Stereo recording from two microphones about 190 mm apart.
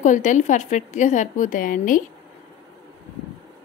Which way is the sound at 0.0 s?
40° left (ahead or behind).